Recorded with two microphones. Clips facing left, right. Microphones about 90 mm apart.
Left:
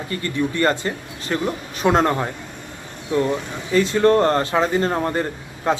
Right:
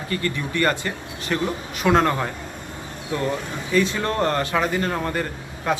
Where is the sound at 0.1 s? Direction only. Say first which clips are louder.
Left 2 dB; 30° left (ahead or behind).